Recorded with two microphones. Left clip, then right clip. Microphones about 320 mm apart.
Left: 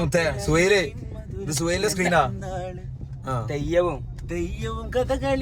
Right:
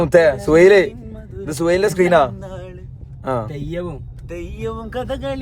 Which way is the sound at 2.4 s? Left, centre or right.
Centre.